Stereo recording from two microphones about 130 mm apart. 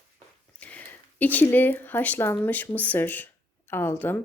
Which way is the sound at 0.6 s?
10° left (ahead or behind).